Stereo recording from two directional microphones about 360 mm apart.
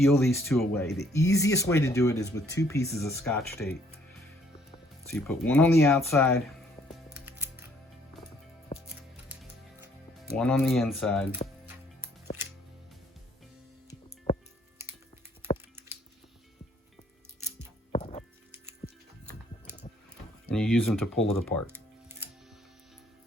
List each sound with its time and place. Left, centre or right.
0.0 s speech: centre
5.1 s speech: centre
7.1 s music: centre
8.7 s music: centre
10.3 s speech: centre
17.9 s music: centre
20.5 s speech: centre